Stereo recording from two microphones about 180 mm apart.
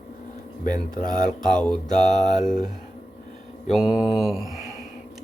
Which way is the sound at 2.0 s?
40° left (ahead or behind).